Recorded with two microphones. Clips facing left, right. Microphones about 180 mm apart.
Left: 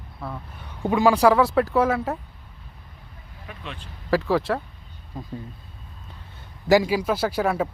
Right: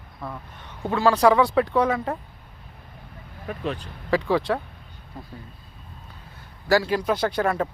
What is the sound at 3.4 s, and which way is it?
Speech, 40° right (ahead or behind).